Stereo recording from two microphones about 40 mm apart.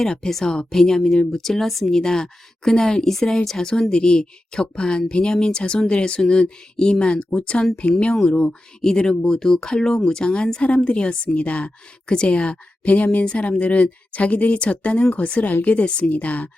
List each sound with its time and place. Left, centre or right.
0.0 s speech: centre
0.3 s speech: centre
2.0 s speech: centre
11.3 s speech: left
12.0 s speech: left